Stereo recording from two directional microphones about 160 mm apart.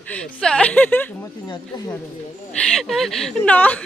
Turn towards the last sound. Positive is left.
turn(degrees=10)  # may be behind; listen again after turning